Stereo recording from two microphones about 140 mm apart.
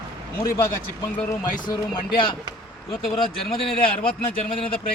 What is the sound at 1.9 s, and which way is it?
Speech, 35° left (ahead or behind).